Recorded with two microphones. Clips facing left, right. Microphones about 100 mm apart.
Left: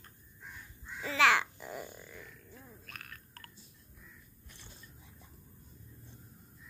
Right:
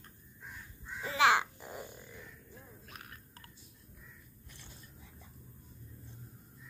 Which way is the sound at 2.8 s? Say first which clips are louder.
Even; 20° right (ahead or behind).